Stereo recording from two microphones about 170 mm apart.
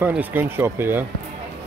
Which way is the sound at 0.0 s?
10° right (ahead or behind).